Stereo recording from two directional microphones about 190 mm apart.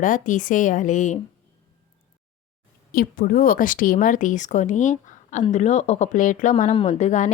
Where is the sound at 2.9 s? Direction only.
50° left (ahead or behind).